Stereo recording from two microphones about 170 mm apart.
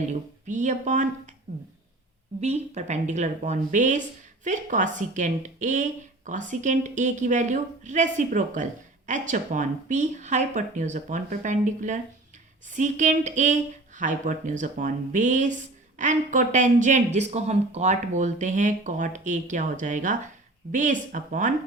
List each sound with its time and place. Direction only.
0.1 s speech: 45° right (ahead or behind)
2.4 s speech: 40° right (ahead or behind)